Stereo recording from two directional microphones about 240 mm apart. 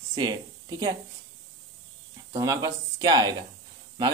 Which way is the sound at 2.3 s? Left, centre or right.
Centre.